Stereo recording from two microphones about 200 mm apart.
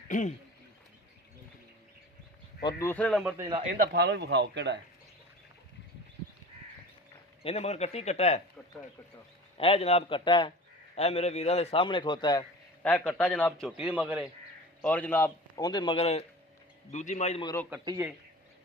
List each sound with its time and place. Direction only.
0.1 s speech: 40° left (ahead or behind)
2.6 s speech: 20° left (ahead or behind)
2.8 s a man's voice: 5° left (ahead or behind)
3.3 s speech: 15° right (ahead or behind)
3.8 s a man's voice: 55° right (ahead or behind)
7.4 s speech: 30° left (ahead or behind)
9.6 s a man's voice: 30° left (ahead or behind)
12.8 s a man's voice: 5° left (ahead or behind)
14.8 s a man's voice: 5° left (ahead or behind); by 17.4 s 35° left (ahead or behind)
17.4 s a man's voice: 15° left (ahead or behind)
17.7 s speech: 10° right (ahead or behind)